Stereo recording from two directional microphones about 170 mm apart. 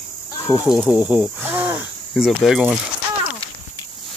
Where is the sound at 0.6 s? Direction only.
5° right (ahead or behind).